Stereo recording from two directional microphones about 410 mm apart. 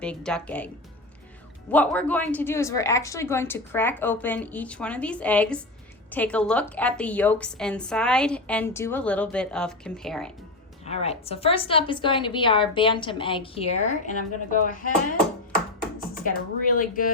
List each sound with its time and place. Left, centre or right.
0.0 s a woman's voice: centre
1.7 s a woman's voice: centre
10.8 s a woman's voice: centre